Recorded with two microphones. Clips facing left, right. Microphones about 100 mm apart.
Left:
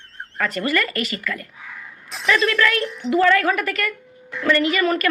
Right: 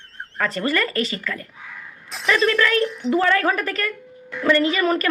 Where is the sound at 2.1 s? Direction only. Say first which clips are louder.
Even; centre (ahead or behind).